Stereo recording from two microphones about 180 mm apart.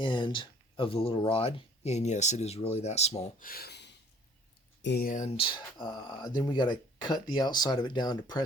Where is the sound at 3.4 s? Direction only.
60° left (ahead or behind).